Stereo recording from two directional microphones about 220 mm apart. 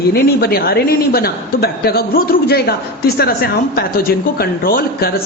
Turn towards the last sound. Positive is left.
turn(degrees=40)  # may be behind; listen again after turning